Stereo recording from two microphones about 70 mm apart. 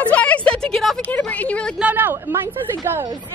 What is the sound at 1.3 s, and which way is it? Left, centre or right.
Speech, centre.